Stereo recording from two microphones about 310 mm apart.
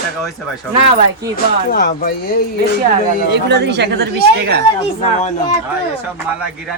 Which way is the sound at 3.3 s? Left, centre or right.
Right.